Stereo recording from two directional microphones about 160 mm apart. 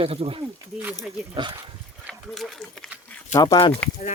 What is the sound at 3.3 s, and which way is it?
Speech, 25° left (ahead or behind).